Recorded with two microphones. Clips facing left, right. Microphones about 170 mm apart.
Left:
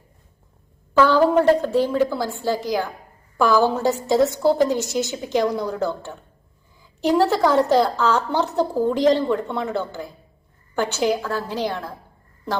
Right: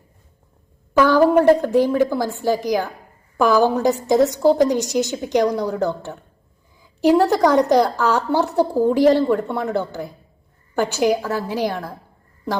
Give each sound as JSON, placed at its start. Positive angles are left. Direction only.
{"t": 0.9, "sound": "a woman's voice", "side_deg": -15}
{"t": 10.8, "sound": "a woman's voice", "side_deg": -15}